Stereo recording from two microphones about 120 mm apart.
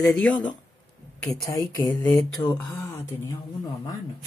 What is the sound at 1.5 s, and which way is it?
Speech, 25° left (ahead or behind).